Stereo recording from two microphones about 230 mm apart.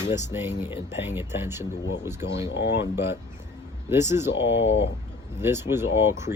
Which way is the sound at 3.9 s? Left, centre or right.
Centre.